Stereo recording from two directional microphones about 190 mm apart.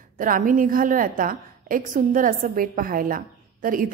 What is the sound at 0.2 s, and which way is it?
A woman's voice, 45° right (ahead or behind).